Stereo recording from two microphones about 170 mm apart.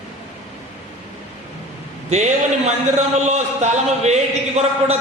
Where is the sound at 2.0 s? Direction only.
40° right (ahead or behind).